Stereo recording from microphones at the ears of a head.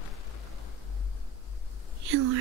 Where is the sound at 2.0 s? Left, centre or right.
Right.